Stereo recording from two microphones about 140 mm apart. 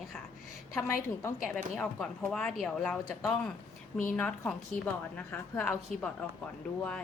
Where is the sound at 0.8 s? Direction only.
20° left (ahead or behind).